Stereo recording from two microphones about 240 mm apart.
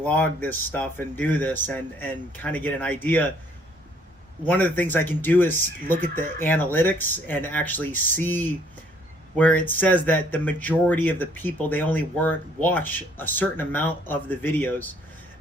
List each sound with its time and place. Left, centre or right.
0.0 s speech: centre
4.4 s speech: centre